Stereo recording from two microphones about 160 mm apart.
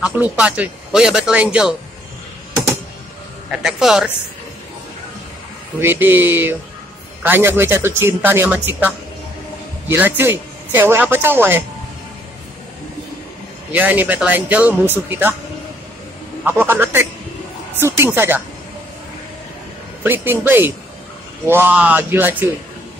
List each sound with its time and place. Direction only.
0.0 s speech: 10° right (ahead or behind)
3.5 s speech: 5° right (ahead or behind)
5.8 s a man's voice: 15° right (ahead or behind)
13.7 s speech: 10° right (ahead or behind)
16.4 s speech: 15° right (ahead or behind)
20.0 s speech: 15° right (ahead or behind)